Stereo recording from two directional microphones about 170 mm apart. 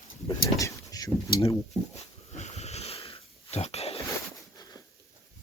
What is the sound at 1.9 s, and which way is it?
Wheeze, 40° left (ahead or behind).